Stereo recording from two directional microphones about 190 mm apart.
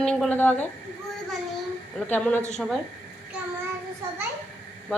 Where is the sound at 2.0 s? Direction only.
10° left (ahead or behind).